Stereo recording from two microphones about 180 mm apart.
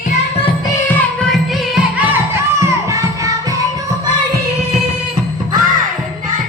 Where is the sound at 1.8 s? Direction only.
10° right (ahead or behind).